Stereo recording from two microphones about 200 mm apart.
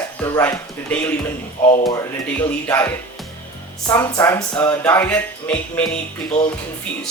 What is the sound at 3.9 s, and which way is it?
Speech, 15° left (ahead or behind).